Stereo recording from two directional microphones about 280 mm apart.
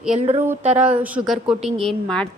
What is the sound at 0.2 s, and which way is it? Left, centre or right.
Speech, right.